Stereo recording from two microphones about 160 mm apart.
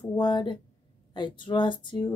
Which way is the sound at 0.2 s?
30° left (ahead or behind).